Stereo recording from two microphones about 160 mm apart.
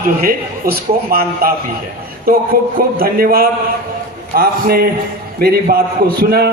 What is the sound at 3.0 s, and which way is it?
A man's voice, 65° right (ahead or behind).